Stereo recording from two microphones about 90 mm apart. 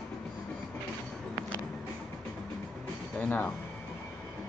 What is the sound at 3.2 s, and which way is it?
Music, 20° left (ahead or behind).